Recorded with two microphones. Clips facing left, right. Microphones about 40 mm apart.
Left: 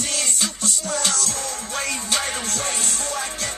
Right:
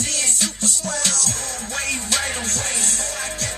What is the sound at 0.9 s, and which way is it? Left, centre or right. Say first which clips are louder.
Music: left 4 dB; left.